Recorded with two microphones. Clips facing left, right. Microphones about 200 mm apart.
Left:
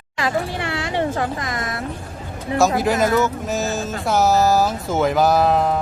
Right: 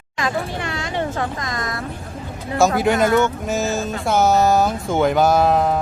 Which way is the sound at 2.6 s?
Centre (ahead or behind).